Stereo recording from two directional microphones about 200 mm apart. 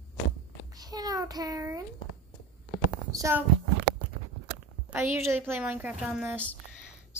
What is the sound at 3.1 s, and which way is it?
Speech, 15° right (ahead or behind).